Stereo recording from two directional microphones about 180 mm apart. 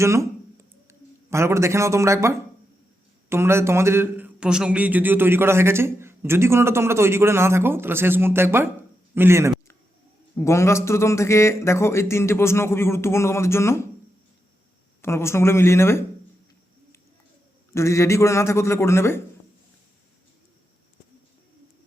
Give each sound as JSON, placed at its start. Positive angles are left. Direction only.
{"t": 0.0, "sound": "a sound", "side_deg": -15}
{"t": 3.2, "sound": "a man's voice", "side_deg": -15}
{"t": 10.3, "sound": "a man's voice", "side_deg": 15}
{"t": 15.0, "sound": "a man's voice", "side_deg": 15}
{"t": 17.7, "sound": "a man's voice", "side_deg": 15}